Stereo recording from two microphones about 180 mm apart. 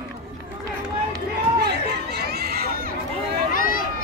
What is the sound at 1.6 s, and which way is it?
Chatter, 65° right (ahead or behind).